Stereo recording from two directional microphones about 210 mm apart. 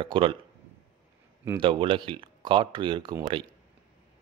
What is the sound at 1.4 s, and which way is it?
A man's voice, 20° right (ahead or behind).